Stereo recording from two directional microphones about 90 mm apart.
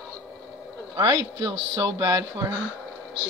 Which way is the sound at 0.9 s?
45° right (ahead or behind).